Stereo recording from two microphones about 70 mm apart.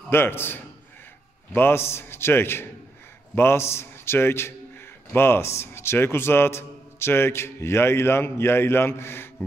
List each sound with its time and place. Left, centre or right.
0.1 s a man's voice: left